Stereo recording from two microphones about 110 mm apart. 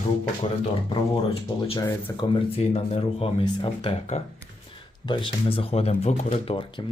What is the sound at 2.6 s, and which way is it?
Speech, 65° left (ahead or behind).